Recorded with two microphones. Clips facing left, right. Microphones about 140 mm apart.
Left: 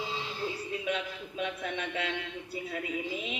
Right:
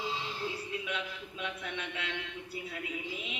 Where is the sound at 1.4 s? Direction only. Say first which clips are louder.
Left 5 dB; 40° left (ahead or behind).